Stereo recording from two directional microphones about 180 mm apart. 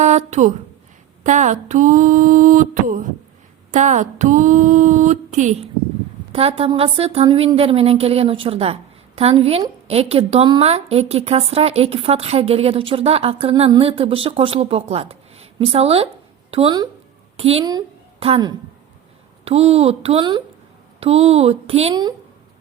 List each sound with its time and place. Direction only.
0.0 s speech: 40° right (ahead or behind)
1.2 s a sound: 40° right (ahead or behind)
6.3 s a woman's voice: 30° right (ahead or behind)